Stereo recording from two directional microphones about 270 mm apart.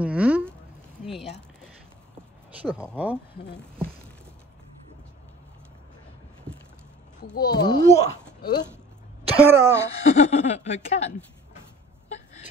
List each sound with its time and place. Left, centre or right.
0.0 s a sound: centre
2.6 s speech: centre
7.3 s a child's voice: centre
9.4 s speech: centre
10.0 s speech: left